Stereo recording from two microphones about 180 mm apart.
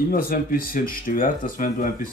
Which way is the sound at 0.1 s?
55° left (ahead or behind).